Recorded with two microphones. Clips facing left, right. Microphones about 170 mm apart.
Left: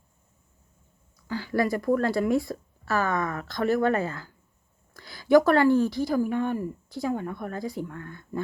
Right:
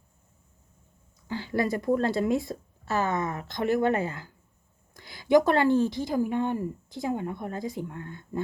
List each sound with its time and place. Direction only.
1.3 s a woman's voice: 20° right (ahead or behind)